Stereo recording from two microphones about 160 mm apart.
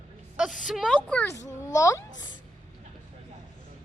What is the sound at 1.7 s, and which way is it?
Speech, 20° left (ahead or behind).